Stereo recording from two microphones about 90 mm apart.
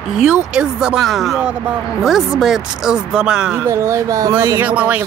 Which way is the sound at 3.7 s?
35° right (ahead or behind).